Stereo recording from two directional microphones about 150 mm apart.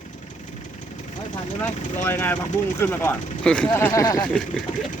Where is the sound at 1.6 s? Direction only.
15° left (ahead or behind).